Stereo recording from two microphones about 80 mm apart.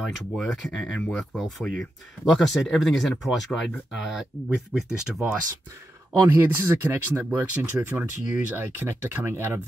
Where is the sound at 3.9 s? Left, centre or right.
Centre.